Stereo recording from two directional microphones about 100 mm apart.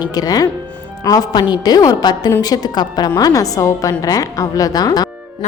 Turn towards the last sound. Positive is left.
turn(degrees=45)  # may be behind; listen again after turning